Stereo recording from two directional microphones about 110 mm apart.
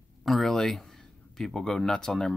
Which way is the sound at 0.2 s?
Centre (ahead or behind).